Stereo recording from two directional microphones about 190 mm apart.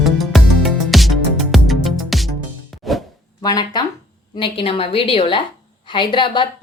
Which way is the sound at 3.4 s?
20° left (ahead or behind).